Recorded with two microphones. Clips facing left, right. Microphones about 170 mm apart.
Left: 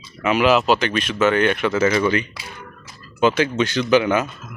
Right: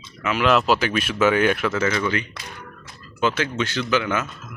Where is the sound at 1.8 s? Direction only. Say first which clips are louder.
Left 5 dB; 25° left (ahead or behind).